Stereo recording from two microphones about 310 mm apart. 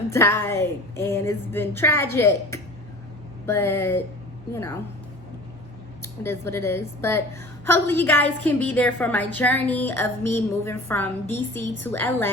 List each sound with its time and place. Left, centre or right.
0.1 s speech: centre
6.0 s a woman's voice: centre